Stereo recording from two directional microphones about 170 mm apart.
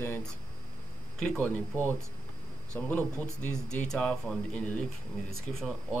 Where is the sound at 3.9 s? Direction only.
5° left (ahead or behind).